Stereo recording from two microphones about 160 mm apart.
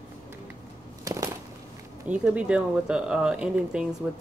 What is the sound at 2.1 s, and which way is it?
Speech, 5° right (ahead or behind).